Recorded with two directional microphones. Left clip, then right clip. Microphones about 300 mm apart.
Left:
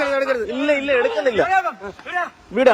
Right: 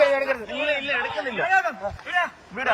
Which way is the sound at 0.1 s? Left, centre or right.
Centre.